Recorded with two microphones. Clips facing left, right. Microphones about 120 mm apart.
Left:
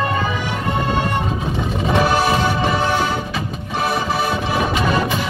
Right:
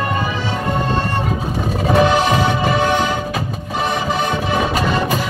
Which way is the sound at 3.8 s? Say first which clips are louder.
Even; 5° left (ahead or behind).